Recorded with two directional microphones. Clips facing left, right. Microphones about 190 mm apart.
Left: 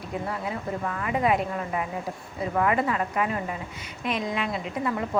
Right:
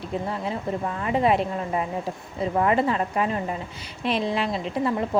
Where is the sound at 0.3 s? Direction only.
25° right (ahead or behind).